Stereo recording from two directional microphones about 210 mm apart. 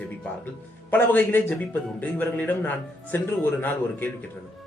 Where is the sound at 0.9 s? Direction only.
10° left (ahead or behind).